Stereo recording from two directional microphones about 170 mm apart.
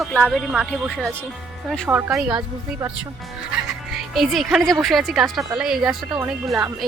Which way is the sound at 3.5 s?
Centre (ahead or behind).